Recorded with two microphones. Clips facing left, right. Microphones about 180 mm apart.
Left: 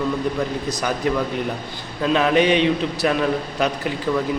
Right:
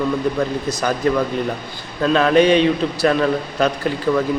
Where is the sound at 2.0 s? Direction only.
15° left (ahead or behind).